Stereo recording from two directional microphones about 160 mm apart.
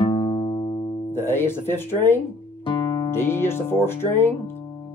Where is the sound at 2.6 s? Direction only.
30° left (ahead or behind).